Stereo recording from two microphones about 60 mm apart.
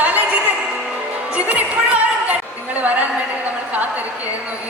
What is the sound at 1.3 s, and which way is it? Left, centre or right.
Music, right.